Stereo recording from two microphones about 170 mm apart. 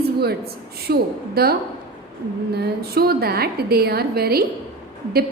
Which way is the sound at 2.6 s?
65° right (ahead or behind).